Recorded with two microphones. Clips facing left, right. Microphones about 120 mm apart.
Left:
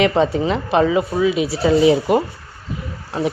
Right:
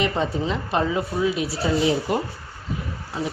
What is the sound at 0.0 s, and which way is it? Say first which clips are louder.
Speech: left 7 dB; 90° left.